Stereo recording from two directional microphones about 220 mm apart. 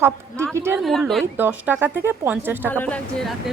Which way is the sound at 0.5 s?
10° right (ahead or behind).